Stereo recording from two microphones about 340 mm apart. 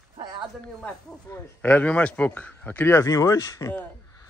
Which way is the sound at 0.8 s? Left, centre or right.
Centre.